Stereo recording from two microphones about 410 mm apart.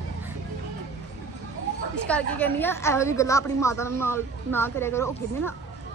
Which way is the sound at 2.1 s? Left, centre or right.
Centre.